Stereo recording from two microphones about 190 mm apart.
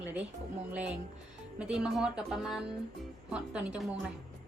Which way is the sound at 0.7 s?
5° right (ahead or behind).